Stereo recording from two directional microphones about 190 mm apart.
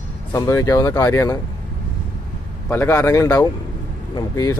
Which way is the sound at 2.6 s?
15° left (ahead or behind).